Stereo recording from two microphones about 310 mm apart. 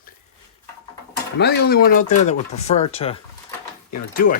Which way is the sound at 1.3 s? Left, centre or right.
Left.